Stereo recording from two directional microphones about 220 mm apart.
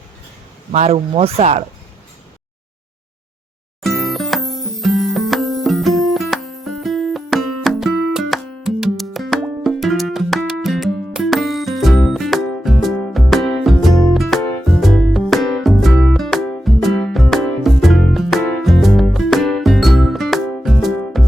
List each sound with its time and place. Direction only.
0.7 s speech: 30° right (ahead or behind)
3.8 s music: centre (ahead or behind)